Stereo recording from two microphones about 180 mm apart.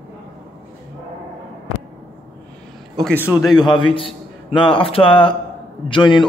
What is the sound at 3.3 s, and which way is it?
A man's voice, 20° left (ahead or behind).